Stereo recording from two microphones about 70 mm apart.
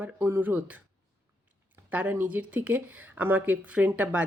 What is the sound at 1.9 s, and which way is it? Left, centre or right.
Speech, right.